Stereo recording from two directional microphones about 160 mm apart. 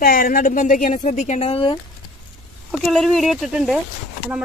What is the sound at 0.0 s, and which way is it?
Speech, 65° left (ahead or behind).